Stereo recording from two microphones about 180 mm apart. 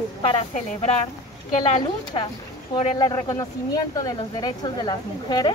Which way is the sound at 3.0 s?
20° left (ahead or behind).